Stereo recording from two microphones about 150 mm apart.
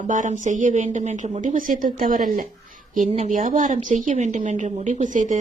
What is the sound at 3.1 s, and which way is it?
A woman's voice, 50° right (ahead or behind).